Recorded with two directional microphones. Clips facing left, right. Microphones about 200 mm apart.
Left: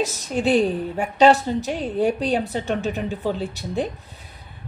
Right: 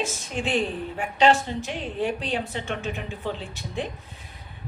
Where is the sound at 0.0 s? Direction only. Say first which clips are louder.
Left 7 dB; 40° left (ahead or behind).